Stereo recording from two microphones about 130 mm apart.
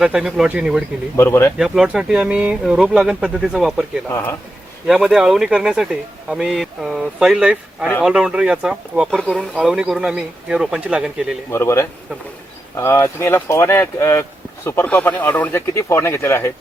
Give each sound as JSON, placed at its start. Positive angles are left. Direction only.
{"t": 0.0, "sound": "speech", "side_deg": -5}
{"t": 1.1, "sound": "speech", "side_deg": 20}
{"t": 1.5, "sound": "speech", "side_deg": -5}
{"t": 4.1, "sound": "speech", "side_deg": 20}
{"t": 4.9, "sound": "speech", "side_deg": -5}
{"t": 9.0, "sound": "speech", "side_deg": 5}
{"t": 11.5, "sound": "speech", "side_deg": 20}